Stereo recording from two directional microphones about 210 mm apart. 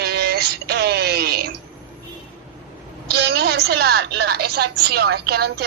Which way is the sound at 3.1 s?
50° right (ahead or behind).